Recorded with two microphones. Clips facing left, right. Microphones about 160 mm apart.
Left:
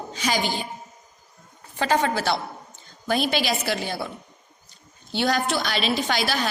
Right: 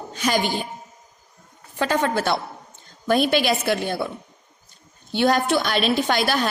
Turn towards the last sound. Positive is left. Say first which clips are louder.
# right 4 dB
turn(degrees=-50)  # may be behind; listen again after turning